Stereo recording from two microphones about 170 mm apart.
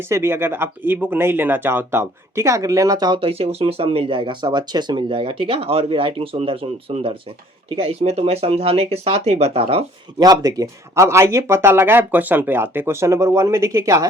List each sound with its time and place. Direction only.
0.1 s speech: 15° right (ahead or behind); by 10.2 s 35° right (ahead or behind)
10.2 s speech: 20° right (ahead or behind)